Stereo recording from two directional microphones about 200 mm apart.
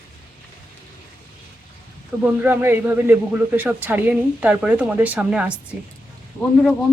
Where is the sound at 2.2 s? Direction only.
10° right (ahead or behind).